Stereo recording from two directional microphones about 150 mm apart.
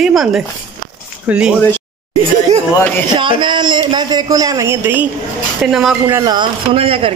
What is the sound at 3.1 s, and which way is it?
A man's voice, 30° right (ahead or behind).